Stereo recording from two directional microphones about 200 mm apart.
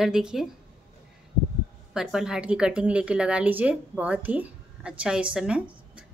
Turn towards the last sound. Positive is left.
turn(degrees=-5)  # may be behind; listen again after turning